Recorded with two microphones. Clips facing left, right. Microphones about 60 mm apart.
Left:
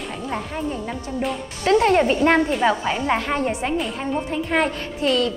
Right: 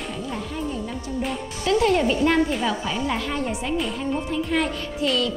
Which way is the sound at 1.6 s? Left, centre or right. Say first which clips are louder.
Left 3 dB; left.